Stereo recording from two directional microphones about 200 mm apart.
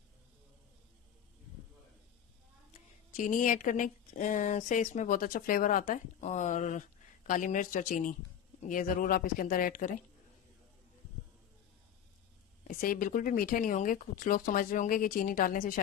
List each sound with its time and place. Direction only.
2.7 s speech: 40° left (ahead or behind)
12.6 s speech: 45° left (ahead or behind)